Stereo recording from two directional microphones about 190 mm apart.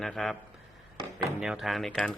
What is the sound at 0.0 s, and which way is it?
Speech, centre (ahead or behind).